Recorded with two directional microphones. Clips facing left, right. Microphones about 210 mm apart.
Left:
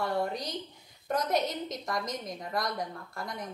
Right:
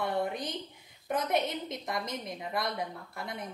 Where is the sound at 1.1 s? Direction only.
55° right (ahead or behind).